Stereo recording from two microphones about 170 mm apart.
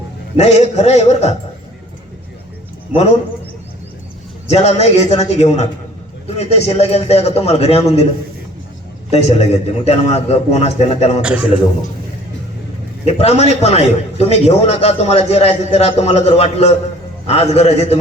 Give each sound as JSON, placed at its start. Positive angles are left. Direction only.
{"t": 0.3, "sound": "a man's voice", "side_deg": 40}
{"t": 2.9, "sound": "a man's voice", "side_deg": 40}
{"t": 4.4, "sound": "a man's voice", "side_deg": 40}
{"t": 9.1, "sound": "a man's voice", "side_deg": 40}
{"t": 11.2, "sound": "a man's voice", "side_deg": -5}
{"t": 13.1, "sound": "a man's voice", "side_deg": 40}